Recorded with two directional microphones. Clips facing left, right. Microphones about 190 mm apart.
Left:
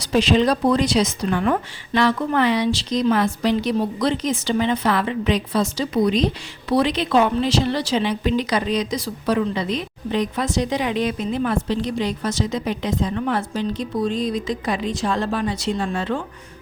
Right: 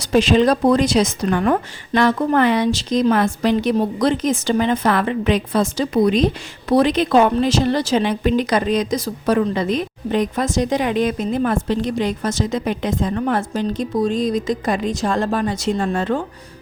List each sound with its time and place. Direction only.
0.0 s speech: 50° right (ahead or behind)